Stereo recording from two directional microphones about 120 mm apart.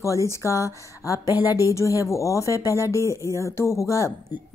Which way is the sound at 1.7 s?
25° left (ahead or behind).